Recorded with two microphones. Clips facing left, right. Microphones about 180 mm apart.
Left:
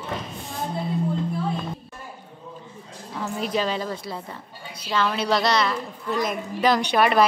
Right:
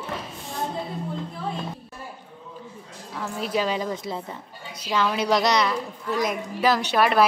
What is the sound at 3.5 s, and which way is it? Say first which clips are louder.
A woman's voice: right 2 dB; 10° right (ahead or behind).